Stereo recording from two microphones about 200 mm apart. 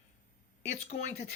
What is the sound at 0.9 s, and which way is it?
Speech, 35° left (ahead or behind).